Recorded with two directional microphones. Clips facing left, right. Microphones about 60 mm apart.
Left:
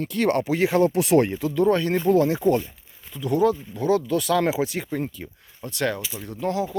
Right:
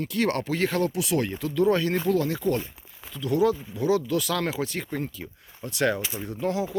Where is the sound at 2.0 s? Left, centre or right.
Left.